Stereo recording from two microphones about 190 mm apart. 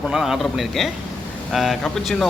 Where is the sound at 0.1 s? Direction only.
Centre (ahead or behind).